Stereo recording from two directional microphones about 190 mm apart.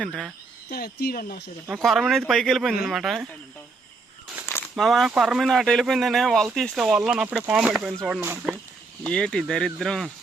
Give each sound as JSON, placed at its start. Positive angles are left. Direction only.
{"t": 0.0, "sound": "speech", "side_deg": 5}
{"t": 0.7, "sound": "speech", "side_deg": 55}
{"t": 1.6, "sound": "speech", "side_deg": 0}
{"t": 4.7, "sound": "speech", "side_deg": 0}
{"t": 9.0, "sound": "speech", "side_deg": 5}